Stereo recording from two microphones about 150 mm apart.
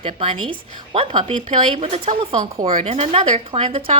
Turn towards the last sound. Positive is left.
turn(degrees=-40)  # may be behind; listen again after turning